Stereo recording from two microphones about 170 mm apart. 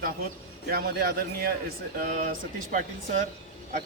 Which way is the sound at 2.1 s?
50° right (ahead or behind).